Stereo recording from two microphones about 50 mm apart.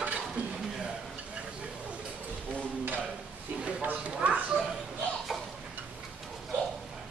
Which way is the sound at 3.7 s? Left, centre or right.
Right.